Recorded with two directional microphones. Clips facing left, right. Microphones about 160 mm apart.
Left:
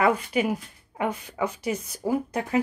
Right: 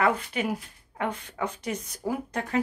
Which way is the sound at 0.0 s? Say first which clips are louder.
Left 3 dB; 10° left (ahead or behind).